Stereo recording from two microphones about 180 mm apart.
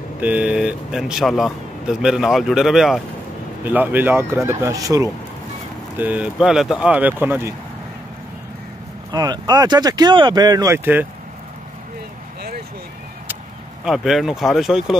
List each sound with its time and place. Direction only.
0.2 s speech: 5° right (ahead or behind)
5.9 s speech: 10° right (ahead or behind)
9.1 s speech: 20° right (ahead or behind)
13.8 s speech: centre (ahead or behind)